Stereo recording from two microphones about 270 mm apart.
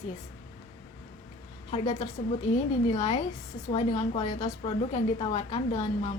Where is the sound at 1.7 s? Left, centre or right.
Left.